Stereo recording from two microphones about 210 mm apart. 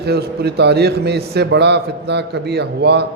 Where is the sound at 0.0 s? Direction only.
50° right (ahead or behind).